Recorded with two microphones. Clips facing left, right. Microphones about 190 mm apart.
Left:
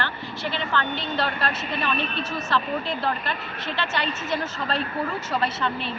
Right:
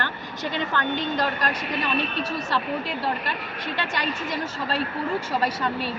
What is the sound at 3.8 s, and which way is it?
Speech, 15° right (ahead or behind).